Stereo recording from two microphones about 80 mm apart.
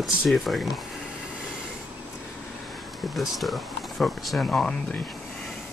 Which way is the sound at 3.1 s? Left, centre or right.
Centre.